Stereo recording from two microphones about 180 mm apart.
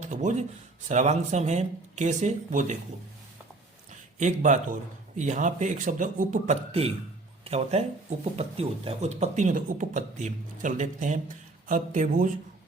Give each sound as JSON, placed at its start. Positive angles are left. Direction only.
{"t": 0.0, "sound": "a sound", "side_deg": -40}
{"t": 0.9, "sound": "speech", "side_deg": -40}
{"t": 4.2, "sound": "a man's voice", "side_deg": -40}
{"t": 6.7, "sound": "a man's voice", "side_deg": -35}